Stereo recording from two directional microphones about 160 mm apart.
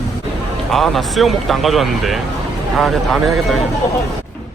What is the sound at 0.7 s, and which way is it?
Speech, centre (ahead or behind).